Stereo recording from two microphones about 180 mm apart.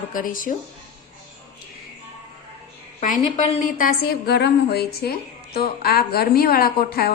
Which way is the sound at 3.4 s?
50° left (ahead or behind).